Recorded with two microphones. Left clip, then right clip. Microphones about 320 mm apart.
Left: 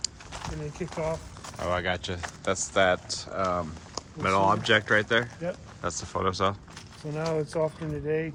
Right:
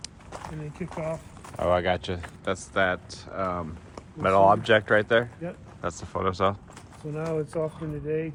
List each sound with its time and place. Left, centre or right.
0.8 s speech: centre
1.5 s speech: centre
7.1 s speech: left